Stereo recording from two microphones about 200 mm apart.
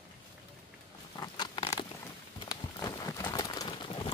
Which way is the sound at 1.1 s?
20° left (ahead or behind).